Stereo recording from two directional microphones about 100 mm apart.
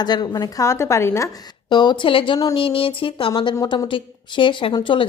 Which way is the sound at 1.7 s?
50° left (ahead or behind).